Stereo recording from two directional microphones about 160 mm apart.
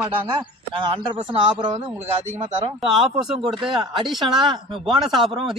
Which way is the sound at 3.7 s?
30° right (ahead or behind).